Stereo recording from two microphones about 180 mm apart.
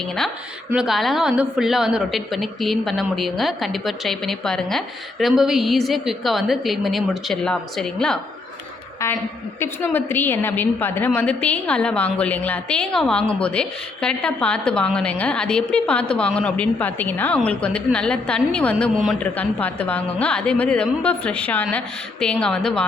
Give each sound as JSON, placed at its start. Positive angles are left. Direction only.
{"t": 0.7, "sound": "a woman's voice", "side_deg": -5}
{"t": 9.0, "sound": "a woman's voice", "side_deg": 15}